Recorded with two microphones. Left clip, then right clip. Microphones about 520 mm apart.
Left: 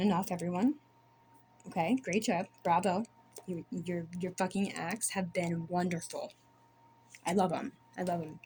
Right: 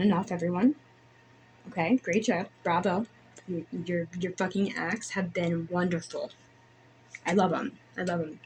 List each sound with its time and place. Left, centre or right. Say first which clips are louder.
0.0 s speech: right 4 dB; left
1.7 s speech: right 5 dB; left